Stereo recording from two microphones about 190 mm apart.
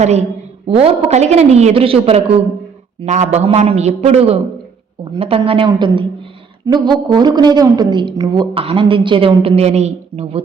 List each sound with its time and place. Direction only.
0.0 s a woman's voice: 35° right (ahead or behind)